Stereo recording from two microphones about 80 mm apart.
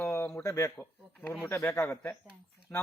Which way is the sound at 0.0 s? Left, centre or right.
Left.